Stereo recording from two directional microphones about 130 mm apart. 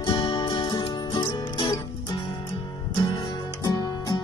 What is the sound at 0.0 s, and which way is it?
Music, 35° left (ahead or behind).